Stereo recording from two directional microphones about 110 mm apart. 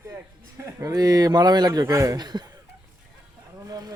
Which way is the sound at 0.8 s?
30° right (ahead or behind).